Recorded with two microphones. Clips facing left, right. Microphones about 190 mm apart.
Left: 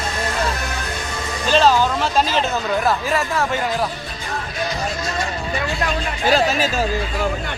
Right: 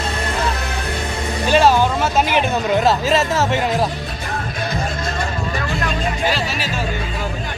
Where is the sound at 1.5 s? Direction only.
10° right (ahead or behind).